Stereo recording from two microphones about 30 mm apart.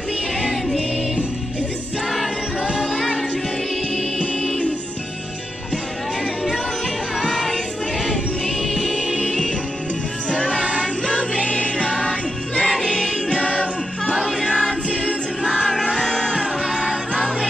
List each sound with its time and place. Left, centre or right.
0.5 s music: centre
7.3 s music: centre
8.9 s music: left
16.0 s music: left
16.3 s music: right